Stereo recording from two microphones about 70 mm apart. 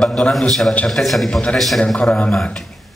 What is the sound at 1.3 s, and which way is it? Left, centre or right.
A man's voice, centre.